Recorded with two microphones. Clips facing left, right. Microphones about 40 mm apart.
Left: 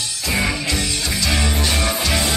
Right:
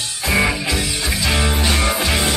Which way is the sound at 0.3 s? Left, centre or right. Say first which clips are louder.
Right 3 dB; centre.